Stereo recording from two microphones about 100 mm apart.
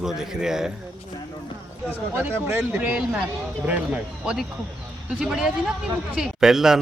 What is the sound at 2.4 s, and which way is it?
A man's voice, 25° right (ahead or behind).